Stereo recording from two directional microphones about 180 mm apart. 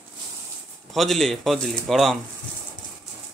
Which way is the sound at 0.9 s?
Centre (ahead or behind).